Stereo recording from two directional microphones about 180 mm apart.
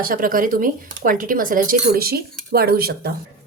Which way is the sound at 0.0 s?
50° right (ahead or behind).